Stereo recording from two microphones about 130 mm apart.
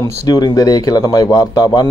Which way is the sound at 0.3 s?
30° left (ahead or behind).